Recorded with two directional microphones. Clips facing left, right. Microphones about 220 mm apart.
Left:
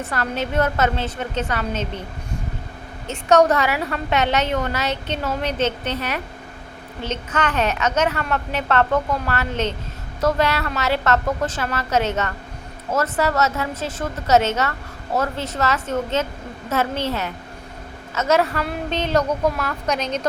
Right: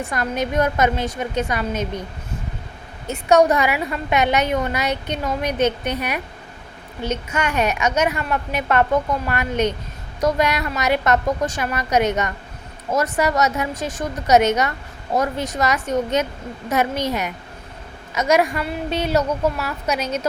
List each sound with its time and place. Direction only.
0.0 s a woman's voice: 15° right (ahead or behind)
3.1 s a woman's voice: 10° right (ahead or behind)